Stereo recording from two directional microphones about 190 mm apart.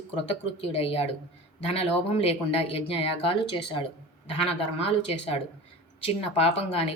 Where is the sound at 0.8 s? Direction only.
30° left (ahead or behind).